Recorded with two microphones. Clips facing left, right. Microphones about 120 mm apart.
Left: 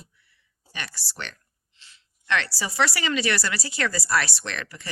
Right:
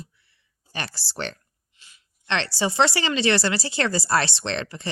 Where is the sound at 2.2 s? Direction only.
25° right (ahead or behind).